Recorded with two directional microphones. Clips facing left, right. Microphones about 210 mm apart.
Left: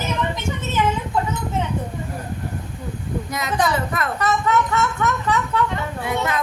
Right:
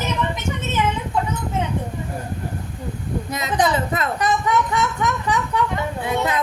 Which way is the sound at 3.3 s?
20° right (ahead or behind).